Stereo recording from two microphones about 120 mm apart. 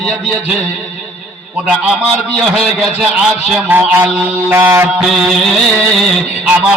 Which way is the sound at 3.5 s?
15° right (ahead or behind).